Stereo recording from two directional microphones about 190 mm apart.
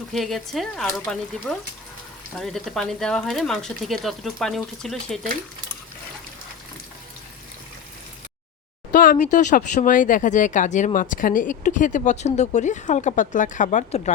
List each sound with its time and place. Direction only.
0.1 s speech: centre (ahead or behind)
8.9 s speech: 45° left (ahead or behind)